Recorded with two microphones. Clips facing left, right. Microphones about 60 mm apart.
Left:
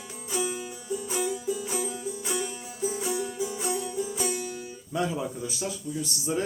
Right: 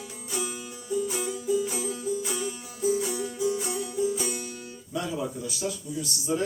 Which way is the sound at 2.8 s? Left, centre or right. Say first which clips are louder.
Right 3 dB; left.